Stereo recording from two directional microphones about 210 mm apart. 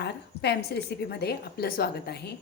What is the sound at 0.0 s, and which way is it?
A woman's voice, 50° left (ahead or behind).